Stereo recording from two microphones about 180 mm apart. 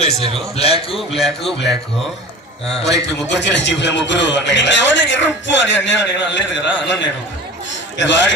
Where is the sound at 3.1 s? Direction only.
75° left (ahead or behind).